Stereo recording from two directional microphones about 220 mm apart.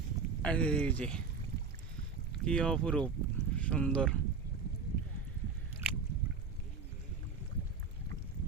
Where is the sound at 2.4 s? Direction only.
5° left (ahead or behind).